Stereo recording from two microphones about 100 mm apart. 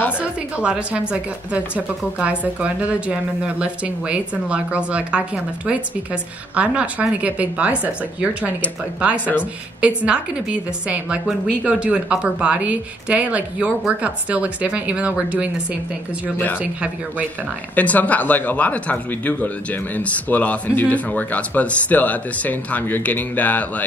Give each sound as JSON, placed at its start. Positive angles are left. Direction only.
{"t": 0.2, "sound": "a woman's voice", "side_deg": -10}
{"t": 9.2, "sound": "speech", "side_deg": 20}
{"t": 9.8, "sound": "a woman's voice", "side_deg": -10}
{"t": 16.5, "sound": "a woman's voice", "side_deg": -10}
{"t": 17.7, "sound": "speech", "side_deg": 15}